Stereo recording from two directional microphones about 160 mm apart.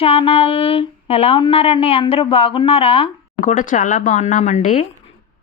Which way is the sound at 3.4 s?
50° left (ahead or behind).